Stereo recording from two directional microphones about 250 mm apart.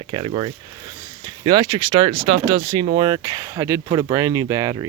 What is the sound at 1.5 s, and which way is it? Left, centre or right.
Speech, centre.